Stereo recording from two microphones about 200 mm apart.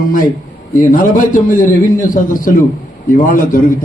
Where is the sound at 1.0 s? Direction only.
40° left (ahead or behind).